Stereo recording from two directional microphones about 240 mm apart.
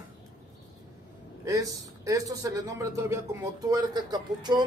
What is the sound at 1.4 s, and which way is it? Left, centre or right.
A man's voice, centre.